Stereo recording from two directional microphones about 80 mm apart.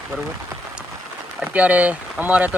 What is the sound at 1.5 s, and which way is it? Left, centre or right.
Speech, centre.